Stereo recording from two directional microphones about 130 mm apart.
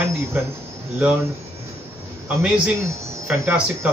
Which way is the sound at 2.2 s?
10° right (ahead or behind).